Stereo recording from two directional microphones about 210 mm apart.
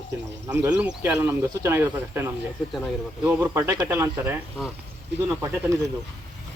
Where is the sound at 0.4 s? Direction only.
15° right (ahead or behind).